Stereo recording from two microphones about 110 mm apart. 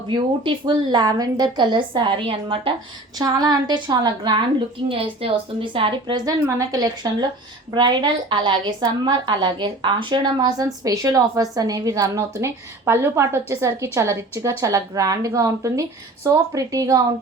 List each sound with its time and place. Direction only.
0.1 s a woman's voice: 45° right (ahead or behind)
3.2 s a woman's voice: 35° right (ahead or behind)
4.9 s a woman's voice: 55° right (ahead or behind)
6.7 s a woman's voice: 35° right (ahead or behind)